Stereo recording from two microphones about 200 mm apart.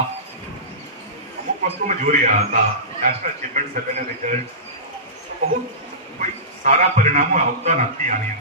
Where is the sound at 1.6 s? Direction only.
40° right (ahead or behind).